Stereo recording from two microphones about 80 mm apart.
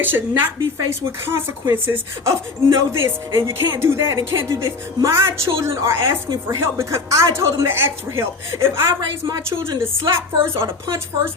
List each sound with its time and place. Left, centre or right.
0.0 s a woman's voice: right
9.0 s a woman's voice: right
10.0 s speech: right